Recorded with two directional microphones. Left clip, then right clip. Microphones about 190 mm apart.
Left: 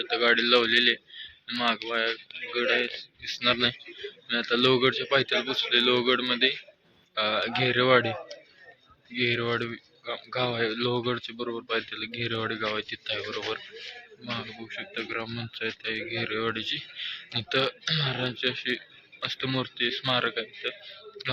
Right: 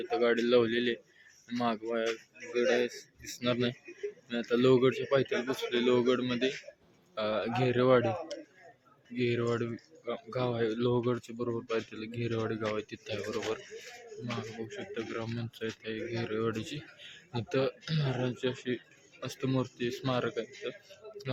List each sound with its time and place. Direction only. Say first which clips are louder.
0.0 s speech: left 5 dB; 15° right (ahead or behind)
1.5 s speech: left 5 dB; 25° right (ahead or behind); by 8.1 s centre (ahead or behind)
9.1 s speech: left 5 dB; centre (ahead or behind)
14.3 s speech: left 5 dB; 10° left (ahead or behind)
17.3 s speech: left 4 dB; 10° right (ahead or behind)